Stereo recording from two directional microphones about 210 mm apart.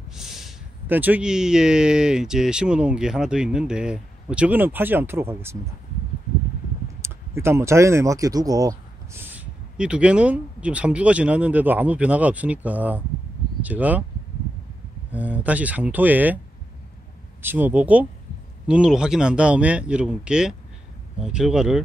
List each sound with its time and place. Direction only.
0.1 s speech: centre (ahead or behind)
7.0 s speech: 10° right (ahead or behind)
15.1 s speech: 5° right (ahead or behind)
17.4 s speech: 10° right (ahead or behind)